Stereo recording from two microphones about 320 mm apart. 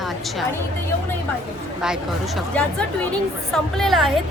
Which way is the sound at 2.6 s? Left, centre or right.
Centre.